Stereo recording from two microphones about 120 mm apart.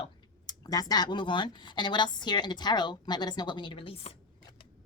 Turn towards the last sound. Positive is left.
turn(degrees=50)  # may be behind; listen again after turning